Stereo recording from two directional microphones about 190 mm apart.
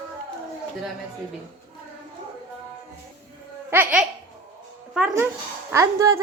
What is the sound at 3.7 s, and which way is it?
Speech, 10° right (ahead or behind).